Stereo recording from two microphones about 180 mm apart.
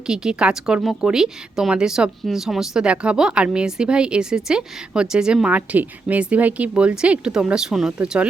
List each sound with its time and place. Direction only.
0.1 s a woman's voice: 5° right (ahead or behind)